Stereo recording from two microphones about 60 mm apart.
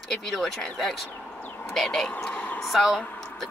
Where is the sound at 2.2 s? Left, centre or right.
Left.